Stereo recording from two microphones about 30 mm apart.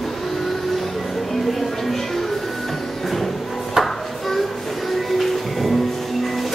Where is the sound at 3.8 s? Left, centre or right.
Centre.